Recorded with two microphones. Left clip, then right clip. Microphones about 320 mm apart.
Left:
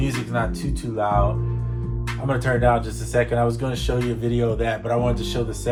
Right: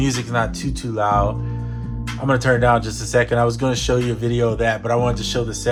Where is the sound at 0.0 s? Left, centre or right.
Right.